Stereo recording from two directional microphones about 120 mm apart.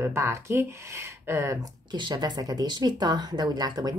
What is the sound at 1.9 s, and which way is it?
Speech, 35° right (ahead or behind).